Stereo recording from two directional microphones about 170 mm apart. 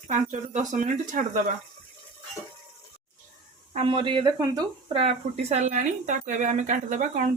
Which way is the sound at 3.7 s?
30° right (ahead or behind).